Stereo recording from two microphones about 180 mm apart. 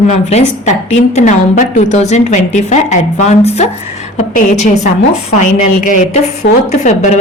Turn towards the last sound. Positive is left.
turn(degrees=40)  # may be behind; listen again after turning